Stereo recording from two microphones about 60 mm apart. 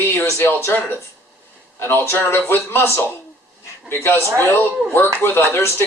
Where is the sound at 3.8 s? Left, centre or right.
Left.